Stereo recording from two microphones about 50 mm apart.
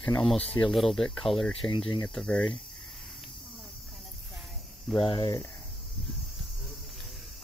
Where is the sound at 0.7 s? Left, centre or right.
Centre.